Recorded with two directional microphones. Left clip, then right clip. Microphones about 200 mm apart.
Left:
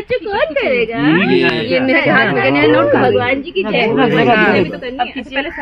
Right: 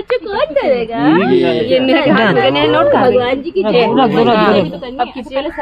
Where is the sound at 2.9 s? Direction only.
55° right (ahead or behind).